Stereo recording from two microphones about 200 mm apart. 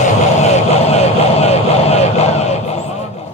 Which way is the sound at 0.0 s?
35° left (ahead or behind).